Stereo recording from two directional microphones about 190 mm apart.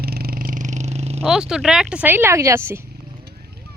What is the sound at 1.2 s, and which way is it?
Speech, centre (ahead or behind).